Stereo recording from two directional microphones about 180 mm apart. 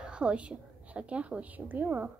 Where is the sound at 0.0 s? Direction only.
5° right (ahead or behind).